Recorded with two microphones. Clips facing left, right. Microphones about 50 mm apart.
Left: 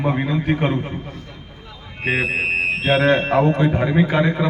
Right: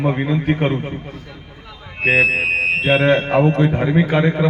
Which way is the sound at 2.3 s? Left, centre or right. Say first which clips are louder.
Right 2 dB; right.